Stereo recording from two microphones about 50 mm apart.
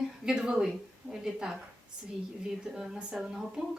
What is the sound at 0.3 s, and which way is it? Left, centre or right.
Speech, centre.